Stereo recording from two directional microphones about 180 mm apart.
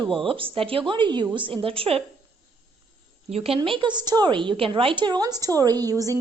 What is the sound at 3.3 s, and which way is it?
A woman's voice, 35° right (ahead or behind).